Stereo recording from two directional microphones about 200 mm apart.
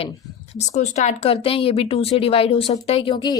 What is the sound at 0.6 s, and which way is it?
A woman's voice, 35° left (ahead or behind).